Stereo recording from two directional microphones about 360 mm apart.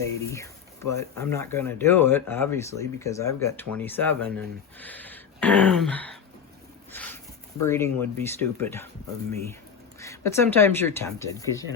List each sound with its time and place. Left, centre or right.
0.0 s speech: centre
4.8 s a sound: centre
7.6 s speech: centre
10.0 s speech: centre